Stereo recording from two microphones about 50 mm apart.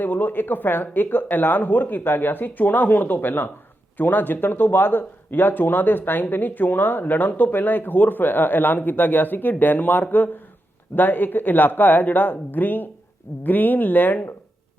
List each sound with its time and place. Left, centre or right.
0.0 s speech: left